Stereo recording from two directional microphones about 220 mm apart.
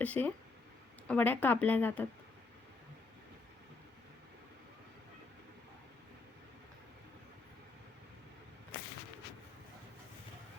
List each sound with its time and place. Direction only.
0.0 s speech: 5° left (ahead or behind)